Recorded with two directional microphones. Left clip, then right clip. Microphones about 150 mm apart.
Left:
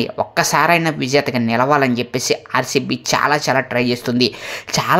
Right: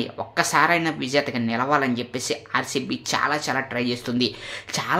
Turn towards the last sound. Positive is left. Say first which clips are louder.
# left 8 dB
turn(degrees=40)  # may be behind; listen again after turning